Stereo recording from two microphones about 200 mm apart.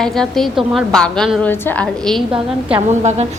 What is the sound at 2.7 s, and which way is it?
Speech, 35° right (ahead or behind).